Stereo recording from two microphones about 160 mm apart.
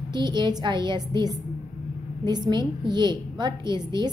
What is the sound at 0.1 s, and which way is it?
A woman's voice, 30° right (ahead or behind).